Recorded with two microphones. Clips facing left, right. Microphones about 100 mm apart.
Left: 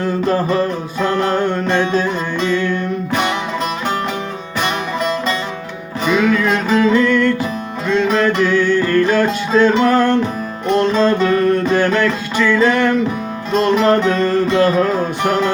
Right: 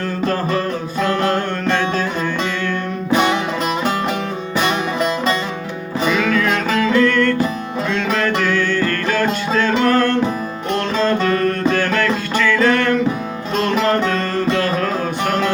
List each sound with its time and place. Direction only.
0.9 s music: 20° left (ahead or behind)
6.1 s music: 15° left (ahead or behind)